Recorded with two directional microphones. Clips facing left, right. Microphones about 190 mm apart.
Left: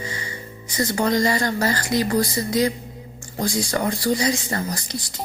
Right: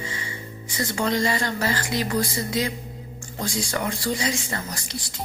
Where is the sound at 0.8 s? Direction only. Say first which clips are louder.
Left 4 dB; 40° left (ahead or behind).